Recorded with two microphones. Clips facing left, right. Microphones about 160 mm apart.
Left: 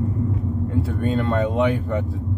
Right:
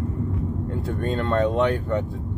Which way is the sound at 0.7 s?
5° left (ahead or behind).